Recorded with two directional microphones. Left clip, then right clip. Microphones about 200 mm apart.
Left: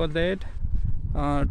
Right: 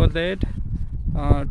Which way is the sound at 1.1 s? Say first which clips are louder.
Right 1 dB; 5° left (ahead or behind).